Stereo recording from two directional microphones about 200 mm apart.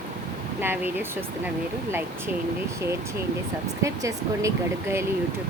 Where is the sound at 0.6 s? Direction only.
10° right (ahead or behind).